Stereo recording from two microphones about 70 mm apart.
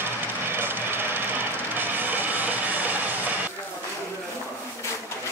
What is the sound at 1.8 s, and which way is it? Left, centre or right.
Music, right.